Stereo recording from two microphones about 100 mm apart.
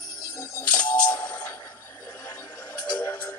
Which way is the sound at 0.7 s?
15° left (ahead or behind).